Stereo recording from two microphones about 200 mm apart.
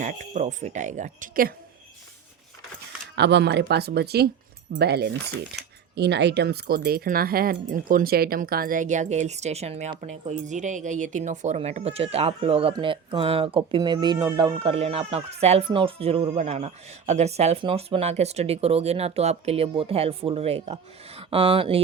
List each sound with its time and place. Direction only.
0.0 s speech: 35° right (ahead or behind)
3.2 s speech: 60° right (ahead or behind); by 21.8 s 25° right (ahead or behind)